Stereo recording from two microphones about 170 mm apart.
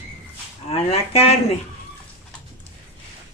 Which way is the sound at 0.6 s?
35° left (ahead or behind).